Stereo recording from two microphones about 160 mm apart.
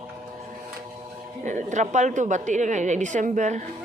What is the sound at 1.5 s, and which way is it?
A woman's voice, 50° right (ahead or behind).